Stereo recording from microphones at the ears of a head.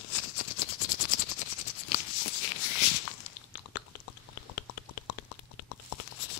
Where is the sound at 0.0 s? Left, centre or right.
Left.